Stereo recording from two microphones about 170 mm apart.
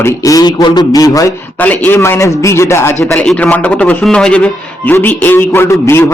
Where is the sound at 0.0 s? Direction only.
20° left (ahead or behind).